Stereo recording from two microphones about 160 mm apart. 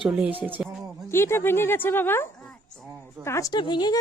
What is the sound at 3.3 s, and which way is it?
Speech, 20° left (ahead or behind).